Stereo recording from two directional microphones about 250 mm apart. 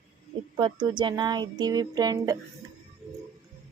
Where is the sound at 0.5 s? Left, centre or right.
Centre.